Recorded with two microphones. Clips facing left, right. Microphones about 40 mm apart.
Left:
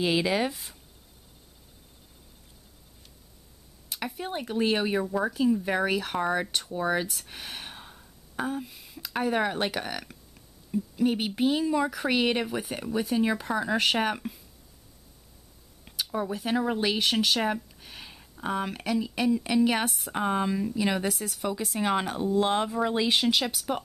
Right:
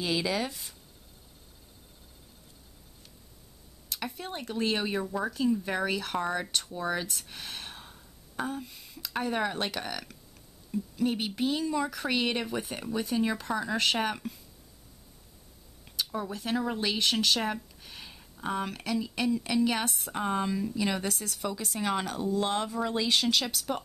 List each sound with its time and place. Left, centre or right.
0.0 s speech: left
3.9 s speech: centre
7.2 s gasp: centre
10.7 s speech: centre
15.8 s speech: centre